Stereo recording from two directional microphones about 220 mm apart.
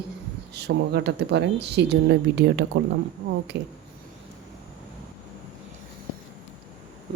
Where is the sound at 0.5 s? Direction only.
50° right (ahead or behind).